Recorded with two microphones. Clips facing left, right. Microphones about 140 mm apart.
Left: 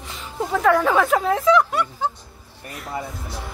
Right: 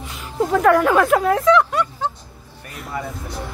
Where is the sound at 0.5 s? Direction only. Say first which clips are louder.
Right 3 dB; centre (ahead or behind).